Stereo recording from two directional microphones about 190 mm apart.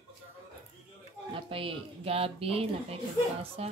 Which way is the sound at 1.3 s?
30° right (ahead or behind).